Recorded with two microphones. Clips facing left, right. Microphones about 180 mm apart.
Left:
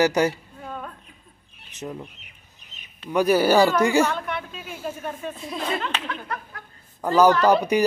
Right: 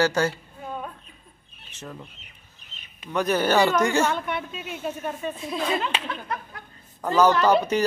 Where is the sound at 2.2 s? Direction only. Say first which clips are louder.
Even; 15° left (ahead or behind).